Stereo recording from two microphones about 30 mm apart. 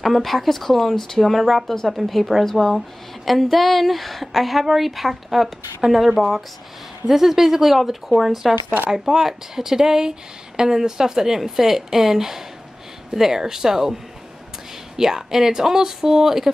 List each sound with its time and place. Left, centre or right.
0.0 s a woman's voice: centre
8.9 s a woman's voice: centre
15.0 s a woman's voice: centre